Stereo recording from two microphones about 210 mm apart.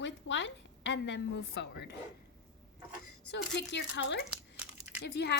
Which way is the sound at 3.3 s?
55° left (ahead or behind).